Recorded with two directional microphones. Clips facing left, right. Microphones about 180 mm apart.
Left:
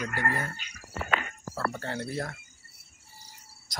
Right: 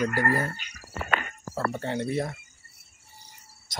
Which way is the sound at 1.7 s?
25° right (ahead or behind).